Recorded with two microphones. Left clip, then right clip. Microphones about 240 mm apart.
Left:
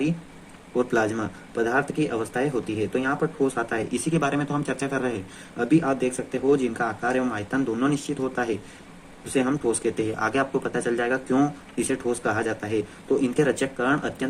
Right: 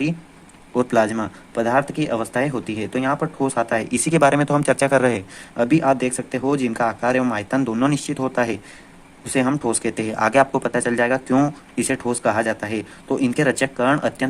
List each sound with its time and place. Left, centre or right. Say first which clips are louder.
0.8 s speech: right 5 dB; right